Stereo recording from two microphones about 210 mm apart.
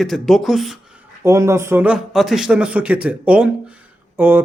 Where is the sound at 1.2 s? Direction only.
15° right (ahead or behind).